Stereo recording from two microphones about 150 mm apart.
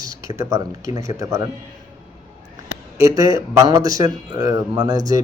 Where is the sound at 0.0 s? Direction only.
25° right (ahead or behind).